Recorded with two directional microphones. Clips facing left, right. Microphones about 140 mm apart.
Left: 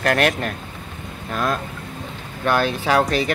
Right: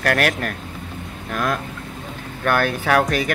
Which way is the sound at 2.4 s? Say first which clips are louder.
Even; 15° left (ahead or behind).